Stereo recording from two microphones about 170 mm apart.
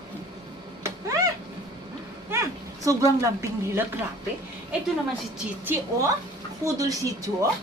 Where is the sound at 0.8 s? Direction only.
20° right (ahead or behind).